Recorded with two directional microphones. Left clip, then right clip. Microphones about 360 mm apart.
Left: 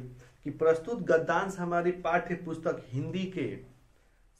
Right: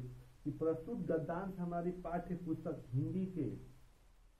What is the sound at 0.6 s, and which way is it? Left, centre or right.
Speech, centre.